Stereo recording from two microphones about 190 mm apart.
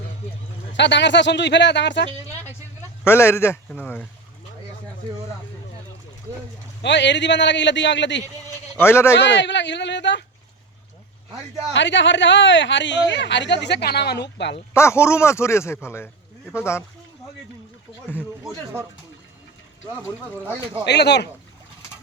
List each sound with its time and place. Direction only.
0.7 s speech: 70° left (ahead or behind)
3.0 s speech: 15° left (ahead or behind)
6.8 s speech: 70° left (ahead or behind)
8.7 s speech: 15° left (ahead or behind)
9.1 s speech: 70° left (ahead or behind)
11.7 s speech: 70° left (ahead or behind)
14.7 s speech: 15° left (ahead or behind)
20.8 s speech: 60° left (ahead or behind)